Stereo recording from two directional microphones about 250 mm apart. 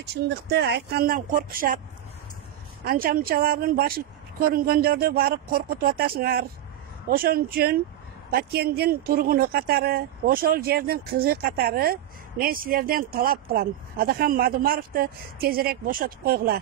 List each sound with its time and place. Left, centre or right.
0.0 s speech: right
2.8 s speech: right